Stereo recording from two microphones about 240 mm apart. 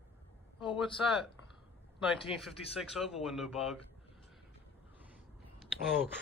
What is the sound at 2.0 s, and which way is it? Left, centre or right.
A man's voice, centre.